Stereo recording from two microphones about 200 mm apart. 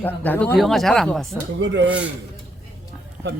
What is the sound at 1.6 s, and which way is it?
Speech, 65° right (ahead or behind).